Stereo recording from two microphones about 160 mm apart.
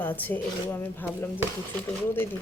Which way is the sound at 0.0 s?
10° left (ahead or behind).